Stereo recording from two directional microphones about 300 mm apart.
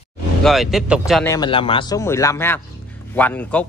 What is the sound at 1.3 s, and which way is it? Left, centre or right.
A man's voice, centre.